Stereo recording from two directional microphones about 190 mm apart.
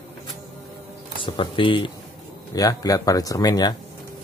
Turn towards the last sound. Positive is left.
turn(degrees=20)  # may be behind; listen again after turning